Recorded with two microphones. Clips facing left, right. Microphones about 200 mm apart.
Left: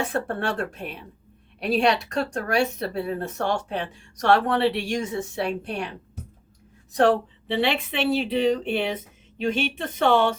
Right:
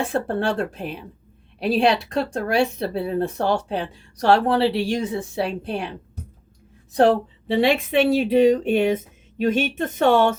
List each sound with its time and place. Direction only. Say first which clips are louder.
0.1 s speech: right 4 dB; 30° right (ahead or behind)
6.9 s speech: right 3 dB; 35° right (ahead or behind)